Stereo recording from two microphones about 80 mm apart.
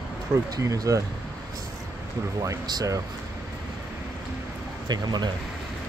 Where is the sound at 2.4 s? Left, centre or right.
Right.